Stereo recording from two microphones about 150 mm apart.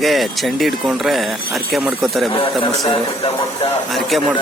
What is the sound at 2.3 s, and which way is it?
Speech, 35° left (ahead or behind).